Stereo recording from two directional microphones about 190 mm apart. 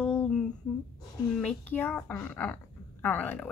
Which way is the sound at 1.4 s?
10° left (ahead or behind).